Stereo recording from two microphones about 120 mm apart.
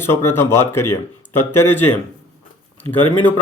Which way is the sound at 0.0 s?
20° left (ahead or behind).